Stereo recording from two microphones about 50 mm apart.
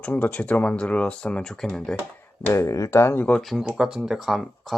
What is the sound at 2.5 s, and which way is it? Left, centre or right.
Speech, left.